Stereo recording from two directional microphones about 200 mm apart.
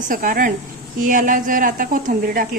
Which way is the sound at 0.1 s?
45° right (ahead or behind).